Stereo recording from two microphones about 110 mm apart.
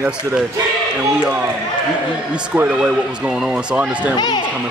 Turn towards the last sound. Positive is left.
turn(degrees=-10)  # may be behind; listen again after turning